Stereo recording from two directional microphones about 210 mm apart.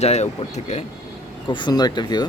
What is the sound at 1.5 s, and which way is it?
Speech, 20° left (ahead or behind).